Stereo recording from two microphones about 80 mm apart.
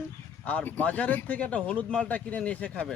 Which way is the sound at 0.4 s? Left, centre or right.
Centre.